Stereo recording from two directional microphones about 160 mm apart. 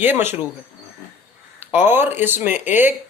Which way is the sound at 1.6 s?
10° right (ahead or behind).